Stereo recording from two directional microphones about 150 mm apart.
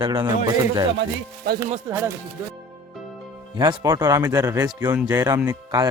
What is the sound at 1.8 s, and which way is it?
Speech, 15° right (ahead or behind).